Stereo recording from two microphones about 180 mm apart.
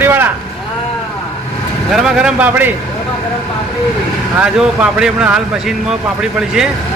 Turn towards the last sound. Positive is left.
turn(degrees=-5)  # may be behind; listen again after turning